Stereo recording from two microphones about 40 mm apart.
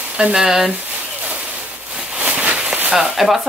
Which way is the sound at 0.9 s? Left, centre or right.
Right.